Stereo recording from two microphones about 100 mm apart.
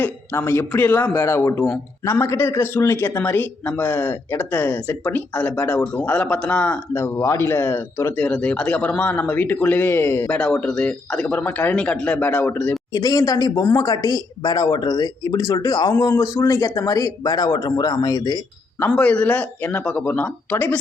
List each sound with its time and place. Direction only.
0.0 s speech: 25° left (ahead or behind)
6.9 s speech: 25° left (ahead or behind)
8.1 s speech: 10° left (ahead or behind); by 10.2 s 25° left (ahead or behind)
10.2 s speech: 10° left (ahead or behind)
12.9 s speech: 35° left (ahead or behind)
18.9 s speech: 15° left (ahead or behind)